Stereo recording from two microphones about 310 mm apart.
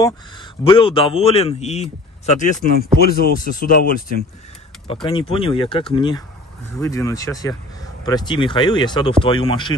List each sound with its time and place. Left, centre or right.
0.7 s a man's voice: centre